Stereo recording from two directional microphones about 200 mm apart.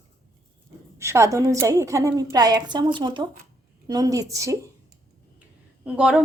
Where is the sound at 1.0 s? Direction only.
15° right (ahead or behind).